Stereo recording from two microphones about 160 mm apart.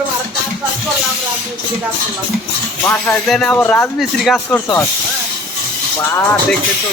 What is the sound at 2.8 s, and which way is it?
Speech, 10° left (ahead or behind).